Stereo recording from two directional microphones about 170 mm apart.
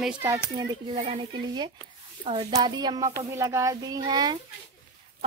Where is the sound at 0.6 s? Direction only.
30° right (ahead or behind).